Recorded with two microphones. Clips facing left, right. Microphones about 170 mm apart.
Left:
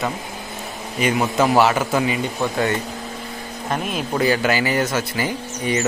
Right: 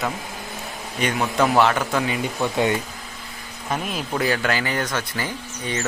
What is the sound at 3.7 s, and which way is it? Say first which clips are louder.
A man's voice: left 2 dB; centre (ahead or behind).